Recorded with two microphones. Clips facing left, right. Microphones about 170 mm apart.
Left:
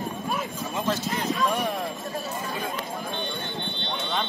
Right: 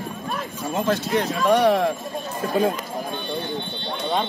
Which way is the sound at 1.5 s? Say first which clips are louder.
Right 10 dB; 85° right.